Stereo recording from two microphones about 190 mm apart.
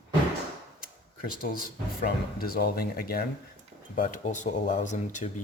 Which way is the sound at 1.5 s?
50° left (ahead or behind).